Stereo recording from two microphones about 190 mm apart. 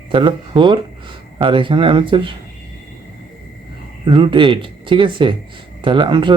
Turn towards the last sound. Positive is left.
turn(degrees=-25)  # may be behind; listen again after turning